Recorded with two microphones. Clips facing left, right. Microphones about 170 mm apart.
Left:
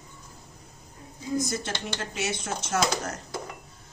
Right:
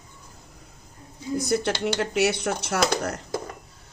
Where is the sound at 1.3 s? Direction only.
65° right (ahead or behind).